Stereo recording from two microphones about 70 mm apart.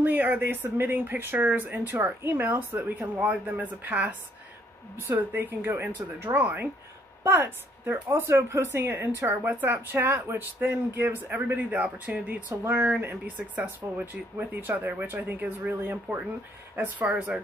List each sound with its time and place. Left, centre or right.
0.0 s speech: right
3.0 s speech: right
5.3 s a woman's voice: right
13.4 s speech: centre
13.9 s speech: right
16.7 s speech: centre